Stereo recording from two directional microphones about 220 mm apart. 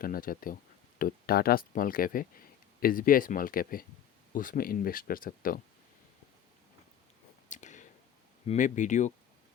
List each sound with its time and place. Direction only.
0.0 s speech: 40° left (ahead or behind)
7.5 s a sound: 35° left (ahead or behind)
8.4 s speech: 35° left (ahead or behind)